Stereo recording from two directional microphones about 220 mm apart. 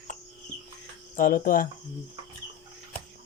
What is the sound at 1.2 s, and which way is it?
Speech, 40° left (ahead or behind).